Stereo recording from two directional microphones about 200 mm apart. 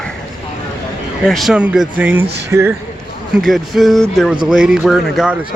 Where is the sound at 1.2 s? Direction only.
Centre (ahead or behind).